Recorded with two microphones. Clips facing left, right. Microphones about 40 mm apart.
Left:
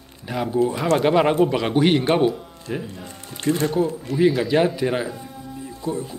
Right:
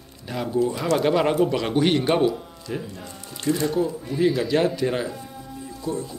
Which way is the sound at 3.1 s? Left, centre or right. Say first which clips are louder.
Left 2 dB; left.